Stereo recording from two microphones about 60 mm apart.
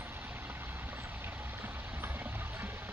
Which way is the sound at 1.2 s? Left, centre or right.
Right.